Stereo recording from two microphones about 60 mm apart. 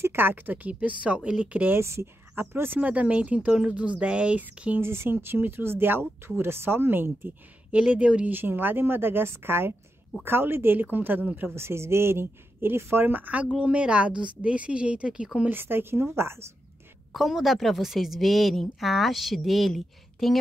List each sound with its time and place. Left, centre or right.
0.0 s speech: right
1.8 s speech: right
2.8 s speech: right
4.7 s speech: right
7.7 s speech: right
8.3 s speech: right
11.3 s speech: right; by 15.2 s centre
15.5 s speech: right
17.1 s a woman's voice: centre